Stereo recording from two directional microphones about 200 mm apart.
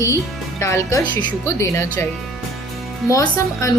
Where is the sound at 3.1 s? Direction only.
15° left (ahead or behind).